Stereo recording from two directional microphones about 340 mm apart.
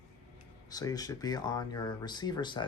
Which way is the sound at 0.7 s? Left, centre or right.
Centre.